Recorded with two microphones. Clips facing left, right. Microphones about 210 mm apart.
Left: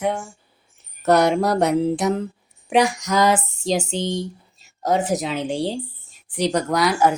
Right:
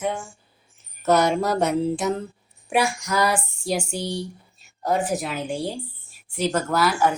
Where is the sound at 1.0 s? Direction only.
65° left (ahead or behind).